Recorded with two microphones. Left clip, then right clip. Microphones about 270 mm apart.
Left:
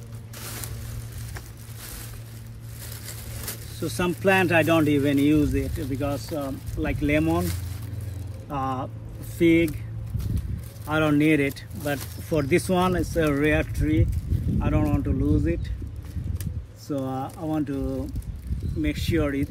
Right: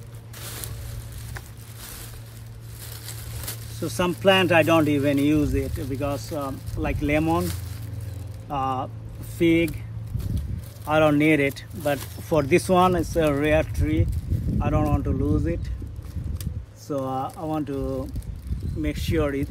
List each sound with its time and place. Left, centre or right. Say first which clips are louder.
3.1 s a sound: even; centre
3.8 s speech: right 3 dB; right
8.5 s speech: right 3 dB; centre
10.9 s speech: right 3 dB; right
16.8 s speech: right 3 dB; right